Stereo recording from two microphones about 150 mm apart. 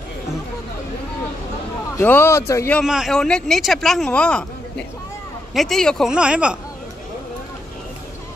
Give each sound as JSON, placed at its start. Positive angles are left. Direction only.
{"t": 2.0, "sound": "a man's voice", "side_deg": 15}
{"t": 2.8, "sound": "speech", "side_deg": 0}